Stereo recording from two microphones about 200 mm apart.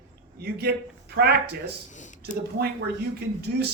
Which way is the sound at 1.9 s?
40° left (ahead or behind).